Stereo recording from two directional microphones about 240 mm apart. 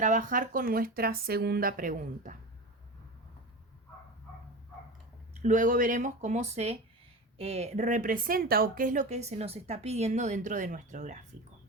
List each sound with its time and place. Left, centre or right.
0.0 s speech: right
5.4 s speech: right